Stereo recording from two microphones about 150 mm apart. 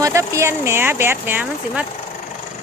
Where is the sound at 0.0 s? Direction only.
20° right (ahead or behind).